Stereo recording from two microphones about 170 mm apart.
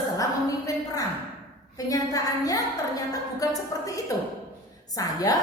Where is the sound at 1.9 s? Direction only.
20° left (ahead or behind).